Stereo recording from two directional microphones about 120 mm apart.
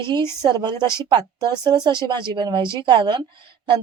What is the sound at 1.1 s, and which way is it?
Speech, 35° right (ahead or behind).